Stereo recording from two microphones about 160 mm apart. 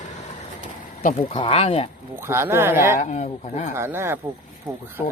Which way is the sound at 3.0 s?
45° left (ahead or behind).